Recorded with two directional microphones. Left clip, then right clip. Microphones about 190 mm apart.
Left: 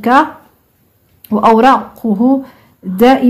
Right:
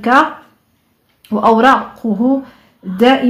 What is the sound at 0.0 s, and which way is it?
Speech, 25° left (ahead or behind).